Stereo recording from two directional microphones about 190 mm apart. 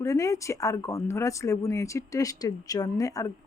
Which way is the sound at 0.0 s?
15° left (ahead or behind).